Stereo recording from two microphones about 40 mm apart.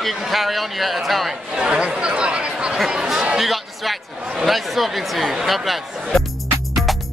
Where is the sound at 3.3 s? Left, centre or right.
Centre.